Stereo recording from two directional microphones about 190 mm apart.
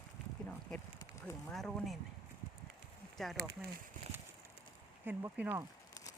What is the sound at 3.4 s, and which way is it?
Speech, 55° right (ahead or behind).